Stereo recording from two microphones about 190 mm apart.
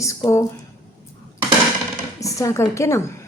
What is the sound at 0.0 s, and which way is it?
Speech, 15° left (ahead or behind).